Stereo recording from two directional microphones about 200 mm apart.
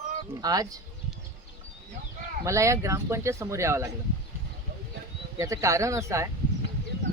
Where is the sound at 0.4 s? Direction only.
20° right (ahead or behind).